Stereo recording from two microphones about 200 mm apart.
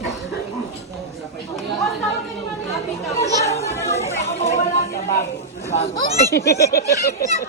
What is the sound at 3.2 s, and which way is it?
Chatter, 15° left (ahead or behind).